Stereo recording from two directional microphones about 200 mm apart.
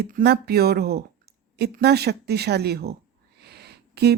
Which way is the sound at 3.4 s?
55° right (ahead or behind).